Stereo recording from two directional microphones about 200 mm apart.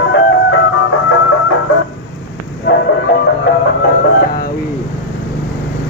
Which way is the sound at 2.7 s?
60° left (ahead or behind).